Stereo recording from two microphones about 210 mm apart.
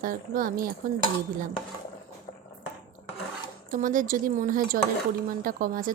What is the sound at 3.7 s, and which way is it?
Speech, 40° right (ahead or behind).